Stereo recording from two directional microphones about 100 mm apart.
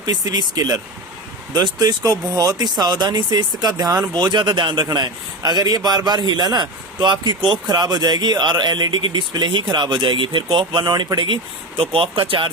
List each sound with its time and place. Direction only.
0.0 s a man's voice: 45° right (ahead or behind)
4.9 s a man's voice: 40° right (ahead or behind)
11.8 s speech: 65° right (ahead or behind)